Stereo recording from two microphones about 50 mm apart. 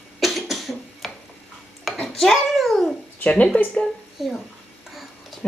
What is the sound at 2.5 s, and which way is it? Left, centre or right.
Cat, centre.